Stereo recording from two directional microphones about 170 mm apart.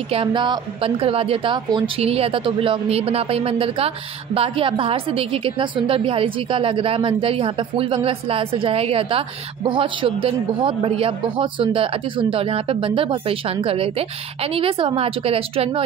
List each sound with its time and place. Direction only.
0.1 s a woman's voice: 30° right (ahead or behind)